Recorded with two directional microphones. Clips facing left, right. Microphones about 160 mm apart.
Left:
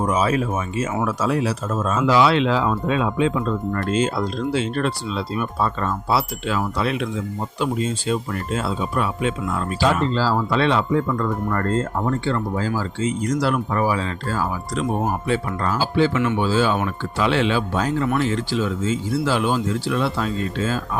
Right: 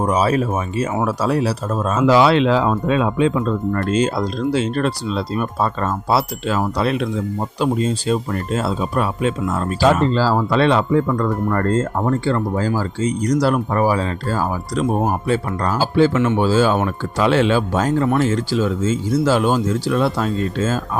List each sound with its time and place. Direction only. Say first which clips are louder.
0.0 s speech: right 3 dB; 35° right (ahead or behind)